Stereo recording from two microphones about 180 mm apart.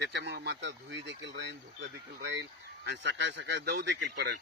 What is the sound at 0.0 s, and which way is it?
Speech, 75° right (ahead or behind).